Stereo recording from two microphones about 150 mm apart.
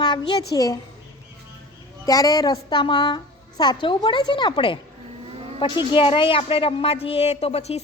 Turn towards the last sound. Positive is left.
turn(degrees=45)  # may be behind; listen again after turning